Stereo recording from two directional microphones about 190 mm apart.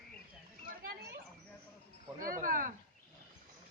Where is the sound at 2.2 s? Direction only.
45° right (ahead or behind).